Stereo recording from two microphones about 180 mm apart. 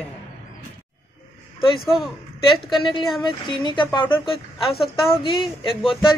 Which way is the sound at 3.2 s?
25° left (ahead or behind).